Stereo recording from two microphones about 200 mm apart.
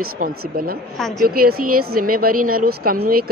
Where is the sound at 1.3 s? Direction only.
50° right (ahead or behind).